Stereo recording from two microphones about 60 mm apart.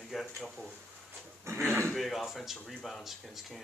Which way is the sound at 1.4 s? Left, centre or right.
Right.